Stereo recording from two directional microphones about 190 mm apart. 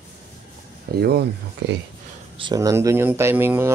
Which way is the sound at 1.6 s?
70° right (ahead or behind).